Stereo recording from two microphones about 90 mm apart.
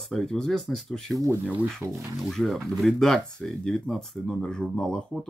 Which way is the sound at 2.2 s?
Centre (ahead or behind).